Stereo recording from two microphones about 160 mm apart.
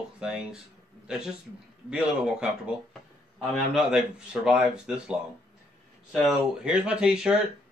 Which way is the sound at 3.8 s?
5° right (ahead or behind).